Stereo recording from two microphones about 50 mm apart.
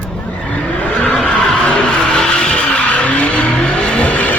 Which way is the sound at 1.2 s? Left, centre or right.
Centre.